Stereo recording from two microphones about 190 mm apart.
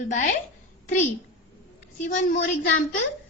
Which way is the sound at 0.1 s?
40° left (ahead or behind).